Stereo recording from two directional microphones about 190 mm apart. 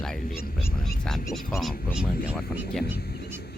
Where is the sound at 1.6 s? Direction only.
Centre (ahead or behind).